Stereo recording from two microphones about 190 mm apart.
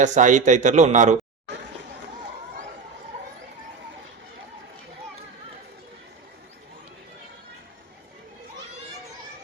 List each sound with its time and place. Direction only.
0.0 s a man's voice: 40° right (ahead or behind)